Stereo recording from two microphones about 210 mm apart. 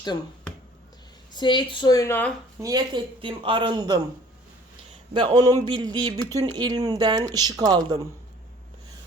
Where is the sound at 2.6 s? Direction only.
15° right (ahead or behind).